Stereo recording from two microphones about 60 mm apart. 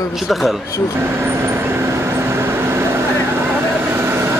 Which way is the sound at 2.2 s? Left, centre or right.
Right.